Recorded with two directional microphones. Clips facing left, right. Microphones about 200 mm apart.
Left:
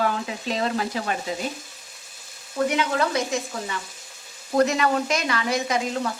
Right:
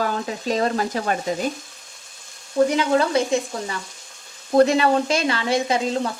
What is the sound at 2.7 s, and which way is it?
Speech, 30° right (ahead or behind).